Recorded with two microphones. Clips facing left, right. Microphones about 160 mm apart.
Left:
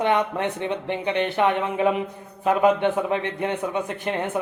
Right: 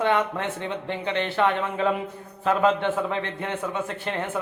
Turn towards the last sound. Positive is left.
turn(degrees=15)  # may be behind; listen again after turning